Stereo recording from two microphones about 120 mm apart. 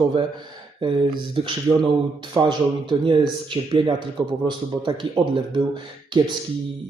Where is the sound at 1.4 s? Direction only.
45° right (ahead or behind).